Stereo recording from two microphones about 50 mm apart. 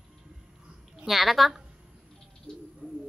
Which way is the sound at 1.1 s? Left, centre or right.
Centre.